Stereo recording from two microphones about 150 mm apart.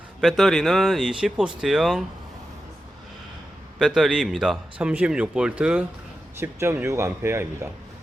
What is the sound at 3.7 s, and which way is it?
Speech, 5° right (ahead or behind).